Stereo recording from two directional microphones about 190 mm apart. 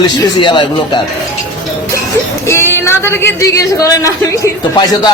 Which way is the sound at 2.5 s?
15° left (ahead or behind).